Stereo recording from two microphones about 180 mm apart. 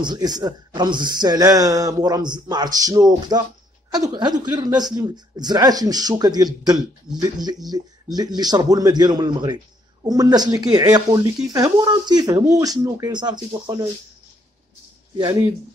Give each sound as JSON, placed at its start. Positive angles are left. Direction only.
{"t": 0.0, "sound": "speech", "side_deg": -25}